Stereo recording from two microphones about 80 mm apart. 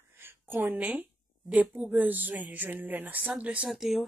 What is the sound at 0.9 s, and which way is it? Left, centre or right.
A woman's voice, centre.